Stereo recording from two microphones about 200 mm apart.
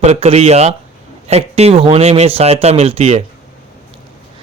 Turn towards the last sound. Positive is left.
turn(degrees=-30)  # may be behind; listen again after turning